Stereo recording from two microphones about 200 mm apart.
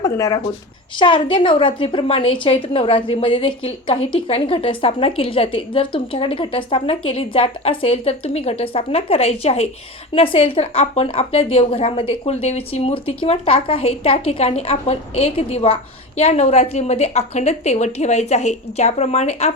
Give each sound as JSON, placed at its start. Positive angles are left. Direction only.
{"t": 0.0, "sound": "a woman's voice", "side_deg": 15}